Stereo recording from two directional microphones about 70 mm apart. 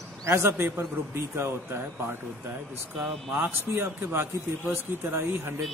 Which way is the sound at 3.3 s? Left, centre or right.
Right.